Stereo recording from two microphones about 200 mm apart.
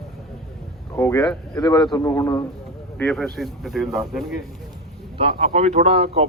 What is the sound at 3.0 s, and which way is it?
Speech, centre (ahead or behind).